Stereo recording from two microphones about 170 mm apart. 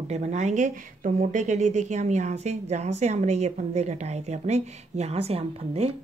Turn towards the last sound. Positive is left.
turn(degrees=-35)  # may be behind; listen again after turning